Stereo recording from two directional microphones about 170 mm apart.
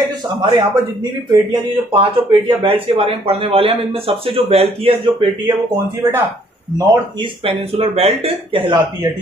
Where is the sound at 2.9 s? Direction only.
35° right (ahead or behind).